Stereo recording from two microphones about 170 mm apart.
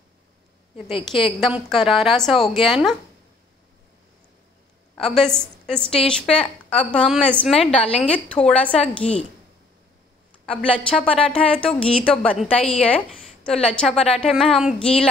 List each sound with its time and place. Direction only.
0.9 s a woman's voice: 30° left (ahead or behind)
1.4 s a woman's voice: centre (ahead or behind)
4.9 s a woman's voice: centre (ahead or behind)
6.4 s a woman's voice: 35° left (ahead or behind)
6.9 s a woman's voice: 5° left (ahead or behind)
10.4 s a woman's voice: 5° left (ahead or behind)